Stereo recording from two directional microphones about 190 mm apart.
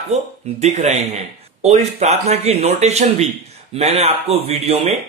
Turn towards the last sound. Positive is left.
turn(degrees=-30)  # may be behind; listen again after turning